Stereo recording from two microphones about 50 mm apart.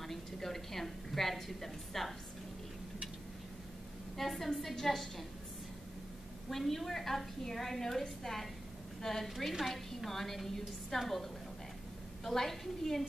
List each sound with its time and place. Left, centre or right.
0.0 s a woman's voice: centre
4.2 s a woman's voice: centre
6.5 s a woman's voice: centre
12.3 s a woman's voice: centre